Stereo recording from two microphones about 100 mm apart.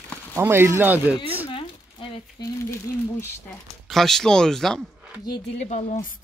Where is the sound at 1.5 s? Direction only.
60° left (ahead or behind).